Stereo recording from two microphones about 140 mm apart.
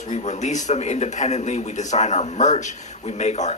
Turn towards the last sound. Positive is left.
turn(degrees=55)  # may be behind; listen again after turning